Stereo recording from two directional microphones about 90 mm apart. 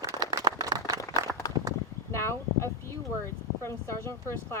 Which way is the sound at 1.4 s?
45° left (ahead or behind).